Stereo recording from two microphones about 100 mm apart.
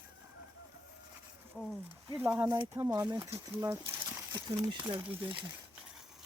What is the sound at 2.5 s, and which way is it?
Speech, 35° right (ahead or behind).